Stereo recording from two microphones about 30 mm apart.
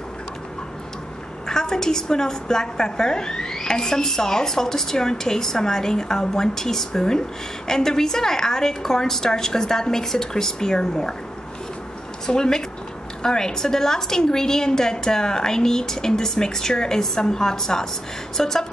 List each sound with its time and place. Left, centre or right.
1.5 s a woman's voice: centre
12.3 s a woman's voice: left
18.4 s a sound: centre